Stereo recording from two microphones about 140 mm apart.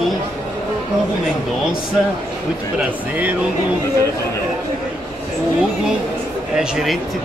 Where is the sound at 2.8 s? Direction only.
10° right (ahead or behind).